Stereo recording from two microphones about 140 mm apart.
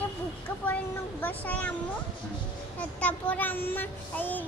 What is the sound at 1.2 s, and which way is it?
Child singing, 10° left (ahead or behind).